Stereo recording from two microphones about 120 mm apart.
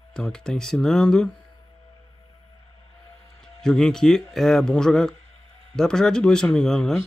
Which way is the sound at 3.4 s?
5° left (ahead or behind).